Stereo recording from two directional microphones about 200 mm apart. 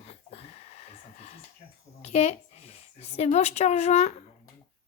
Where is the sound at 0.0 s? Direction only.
30° left (ahead or behind).